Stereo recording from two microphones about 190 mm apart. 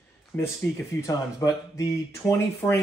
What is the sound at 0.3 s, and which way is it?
Speech, 10° left (ahead or behind).